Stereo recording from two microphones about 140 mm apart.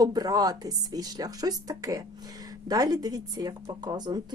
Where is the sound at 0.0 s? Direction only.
30° right (ahead or behind).